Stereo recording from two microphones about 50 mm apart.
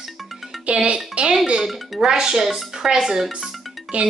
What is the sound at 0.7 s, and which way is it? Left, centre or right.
Speech, right.